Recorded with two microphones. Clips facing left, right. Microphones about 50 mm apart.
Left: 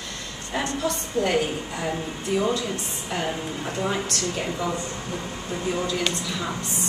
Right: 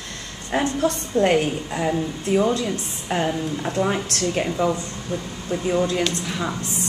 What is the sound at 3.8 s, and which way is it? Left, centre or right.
Speech, right.